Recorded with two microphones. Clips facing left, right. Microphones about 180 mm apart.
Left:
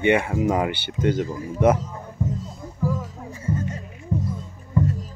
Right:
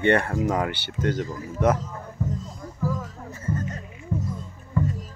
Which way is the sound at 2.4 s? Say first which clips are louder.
Left 2 dB; 10° left (ahead or behind).